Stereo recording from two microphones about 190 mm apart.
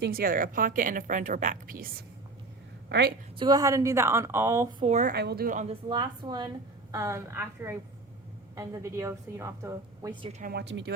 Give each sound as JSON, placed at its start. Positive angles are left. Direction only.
{"t": 0.0, "sound": "a woman's voice", "side_deg": -50}
{"t": 2.9, "sound": "a woman's voice", "side_deg": -65}
{"t": 3.3, "sound": "a woman's voice", "side_deg": -20}
{"t": 4.9, "sound": "a woman's voice", "side_deg": -40}
{"t": 5.1, "sound": "speech", "side_deg": -60}
{"t": 5.9, "sound": "a woman's voice", "side_deg": -20}
{"t": 10.4, "sound": "speech", "side_deg": -60}